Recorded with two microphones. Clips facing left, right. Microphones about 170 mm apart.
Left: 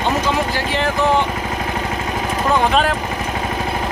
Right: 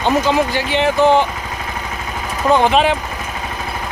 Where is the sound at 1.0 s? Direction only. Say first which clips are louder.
Right 4 dB; 30° right (ahead or behind).